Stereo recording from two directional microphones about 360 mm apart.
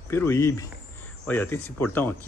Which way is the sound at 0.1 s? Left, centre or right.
Centre.